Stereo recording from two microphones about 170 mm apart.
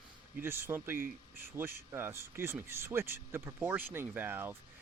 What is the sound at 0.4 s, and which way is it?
Speech, 15° right (ahead or behind).